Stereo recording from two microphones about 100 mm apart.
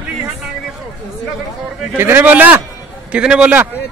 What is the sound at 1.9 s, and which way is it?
A man's voice, 20° right (ahead or behind).